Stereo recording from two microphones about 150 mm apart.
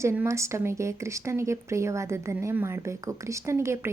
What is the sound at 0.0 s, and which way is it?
A woman's voice, 15° right (ahead or behind).